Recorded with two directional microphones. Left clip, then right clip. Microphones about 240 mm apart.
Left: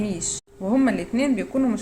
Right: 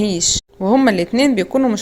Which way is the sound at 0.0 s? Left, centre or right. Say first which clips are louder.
Right 11 dB; right.